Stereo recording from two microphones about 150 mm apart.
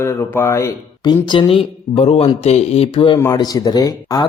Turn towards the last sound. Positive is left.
turn(degrees=25)  # may be behind; listen again after turning